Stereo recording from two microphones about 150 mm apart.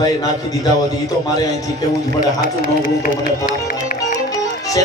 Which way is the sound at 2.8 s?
65° left (ahead or behind).